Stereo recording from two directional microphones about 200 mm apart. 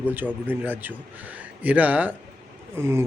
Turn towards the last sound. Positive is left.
turn(degrees=-15)  # may be behind; listen again after turning